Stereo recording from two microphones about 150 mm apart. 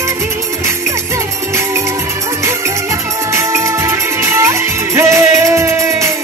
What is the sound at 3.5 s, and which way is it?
Music, 20° right (ahead or behind).